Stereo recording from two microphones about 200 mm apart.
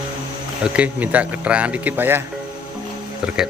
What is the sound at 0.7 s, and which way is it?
Speech, 5° right (ahead or behind).